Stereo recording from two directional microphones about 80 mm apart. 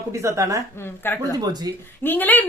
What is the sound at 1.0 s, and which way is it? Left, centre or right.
Speech, left.